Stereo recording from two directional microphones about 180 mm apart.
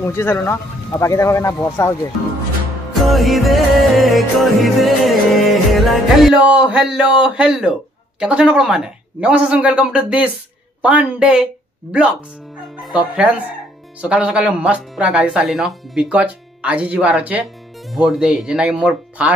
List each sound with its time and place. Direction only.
0.0 s speech: 15° left (ahead or behind)
2.9 s speech: centre (ahead or behind)
12.8 s speech: 5° right (ahead or behind)